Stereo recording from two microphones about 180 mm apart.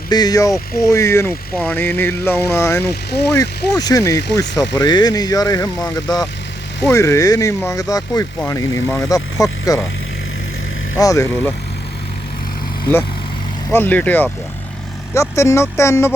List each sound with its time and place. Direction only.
0.1 s speech: 20° left (ahead or behind)
2.9 s speech: 65° left (ahead or behind)
3.3 s speech: 20° left (ahead or behind)
10.9 s speech: 15° left (ahead or behind)
13.7 s speech: 10° left (ahead or behind)